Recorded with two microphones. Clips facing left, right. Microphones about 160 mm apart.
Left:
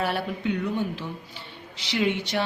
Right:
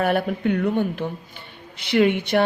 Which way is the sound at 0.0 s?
55° right (ahead or behind).